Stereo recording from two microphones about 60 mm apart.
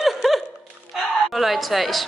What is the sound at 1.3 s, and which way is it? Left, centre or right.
Speech, centre.